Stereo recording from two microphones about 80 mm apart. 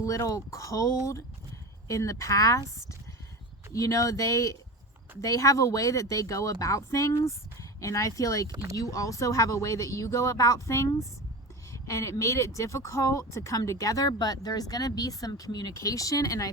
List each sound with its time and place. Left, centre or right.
0.0 s speech: left
3.7 s speech: left
14.1 s speech: left